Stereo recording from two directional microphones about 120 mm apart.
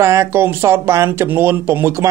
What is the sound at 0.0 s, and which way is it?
Speech, 25° right (ahead or behind).